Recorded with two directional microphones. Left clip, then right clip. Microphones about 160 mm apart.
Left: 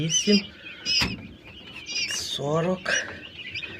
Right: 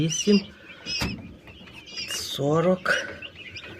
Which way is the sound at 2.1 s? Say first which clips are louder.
Right 6 dB; 60° right (ahead or behind).